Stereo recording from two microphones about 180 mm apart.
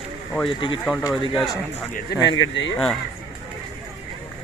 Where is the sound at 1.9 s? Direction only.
75° left (ahead or behind); by 2.7 s 90° left.